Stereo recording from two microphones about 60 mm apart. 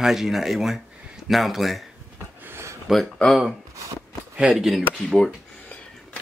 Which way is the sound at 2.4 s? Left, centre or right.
Right.